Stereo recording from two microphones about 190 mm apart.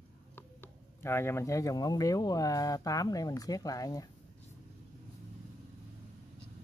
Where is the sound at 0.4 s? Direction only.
10° left (ahead or behind).